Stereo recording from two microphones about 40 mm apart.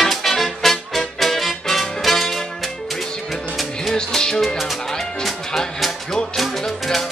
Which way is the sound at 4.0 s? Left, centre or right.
Centre.